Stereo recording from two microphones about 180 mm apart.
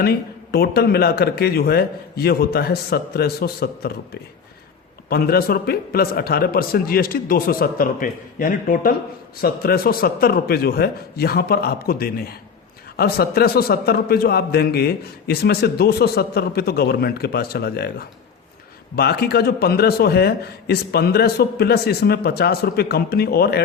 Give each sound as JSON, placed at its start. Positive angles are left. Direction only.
{"t": 0.0, "sound": "a man's voice", "side_deg": 60}
{"t": 18.9, "sound": "a man's voice", "side_deg": 65}